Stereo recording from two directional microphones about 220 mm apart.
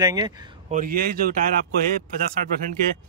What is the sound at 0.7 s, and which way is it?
Speech, 40° right (ahead or behind).